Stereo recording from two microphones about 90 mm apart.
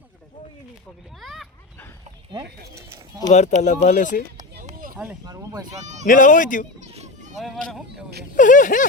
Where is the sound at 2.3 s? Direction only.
40° right (ahead or behind).